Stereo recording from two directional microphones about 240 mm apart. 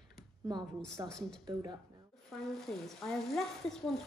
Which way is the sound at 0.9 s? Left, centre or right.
Centre.